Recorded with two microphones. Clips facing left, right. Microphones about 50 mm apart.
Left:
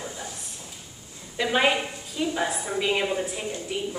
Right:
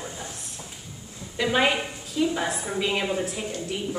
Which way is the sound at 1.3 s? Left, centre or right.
Centre.